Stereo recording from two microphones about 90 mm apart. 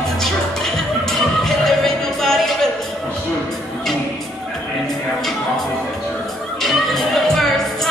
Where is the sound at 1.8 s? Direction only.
5° left (ahead or behind).